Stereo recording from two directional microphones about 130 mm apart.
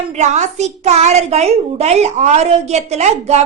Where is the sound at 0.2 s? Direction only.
60° right (ahead or behind).